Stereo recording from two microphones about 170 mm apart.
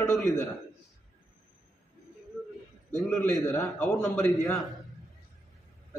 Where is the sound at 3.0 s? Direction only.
5° left (ahead or behind).